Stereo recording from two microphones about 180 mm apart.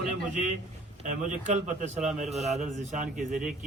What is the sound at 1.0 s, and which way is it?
Speech, 40° right (ahead or behind).